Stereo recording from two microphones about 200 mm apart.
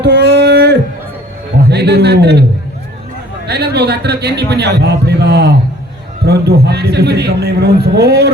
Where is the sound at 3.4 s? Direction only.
55° right (ahead or behind).